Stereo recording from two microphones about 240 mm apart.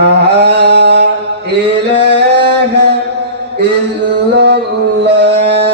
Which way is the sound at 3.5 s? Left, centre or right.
Right.